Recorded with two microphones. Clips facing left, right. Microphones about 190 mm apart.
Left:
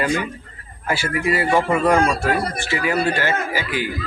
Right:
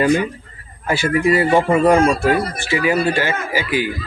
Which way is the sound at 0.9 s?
25° right (ahead or behind).